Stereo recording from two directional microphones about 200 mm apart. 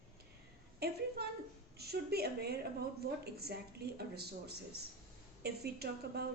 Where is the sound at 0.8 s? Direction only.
50° right (ahead or behind).